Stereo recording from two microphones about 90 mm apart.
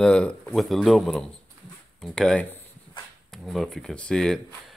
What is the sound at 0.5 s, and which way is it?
Speech, centre (ahead or behind).